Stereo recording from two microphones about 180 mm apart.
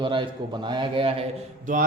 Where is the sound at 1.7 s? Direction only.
45° right (ahead or behind).